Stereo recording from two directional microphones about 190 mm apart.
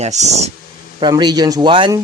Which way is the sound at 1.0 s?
20° right (ahead or behind).